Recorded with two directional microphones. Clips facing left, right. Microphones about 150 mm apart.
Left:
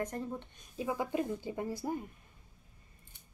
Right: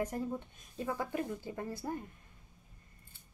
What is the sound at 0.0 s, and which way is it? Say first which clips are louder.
Speech: right 1 dB; 5° right (ahead or behind).